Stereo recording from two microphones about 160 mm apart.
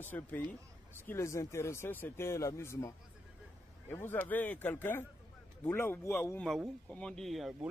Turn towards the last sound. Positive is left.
turn(degrees=0)  # may be behind; listen again after turning